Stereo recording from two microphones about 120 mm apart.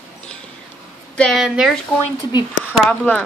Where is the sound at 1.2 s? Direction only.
Centre (ahead or behind).